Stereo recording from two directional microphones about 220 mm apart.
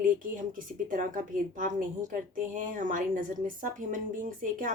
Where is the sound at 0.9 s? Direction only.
35° right (ahead or behind).